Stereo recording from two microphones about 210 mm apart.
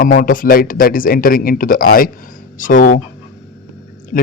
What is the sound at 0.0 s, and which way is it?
Speech, 40° left (ahead or behind).